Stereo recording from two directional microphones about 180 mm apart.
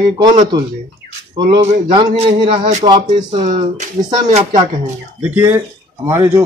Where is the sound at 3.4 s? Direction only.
40° right (ahead or behind).